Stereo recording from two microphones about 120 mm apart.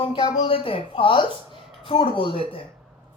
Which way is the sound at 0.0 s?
45° left (ahead or behind).